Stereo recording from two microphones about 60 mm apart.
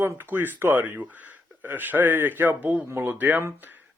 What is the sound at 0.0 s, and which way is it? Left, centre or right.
Speech, right.